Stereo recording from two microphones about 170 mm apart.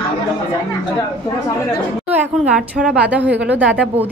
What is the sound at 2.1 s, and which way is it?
A woman's voice, 5° right (ahead or behind).